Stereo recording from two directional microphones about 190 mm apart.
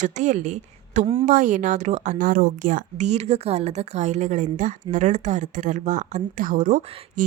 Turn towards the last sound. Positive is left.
turn(degrees=-45)  # may be behind; listen again after turning